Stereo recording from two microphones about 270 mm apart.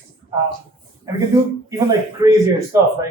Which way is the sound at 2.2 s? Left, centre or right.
Centre.